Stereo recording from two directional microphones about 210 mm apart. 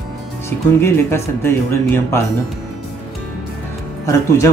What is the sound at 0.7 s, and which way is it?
Speech, 10° left (ahead or behind).